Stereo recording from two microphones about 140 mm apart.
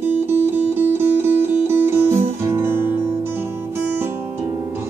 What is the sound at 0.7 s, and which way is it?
Music, 15° right (ahead or behind).